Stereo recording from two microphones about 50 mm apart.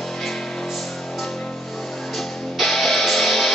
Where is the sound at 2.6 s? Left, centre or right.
Centre.